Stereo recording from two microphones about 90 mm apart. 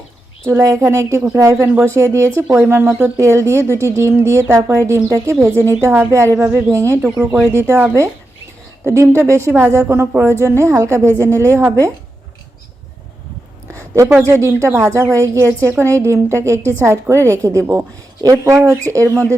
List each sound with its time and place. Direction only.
0.4 s a woman's voice: 35° right (ahead or behind)
13.9 s speech: 30° right (ahead or behind)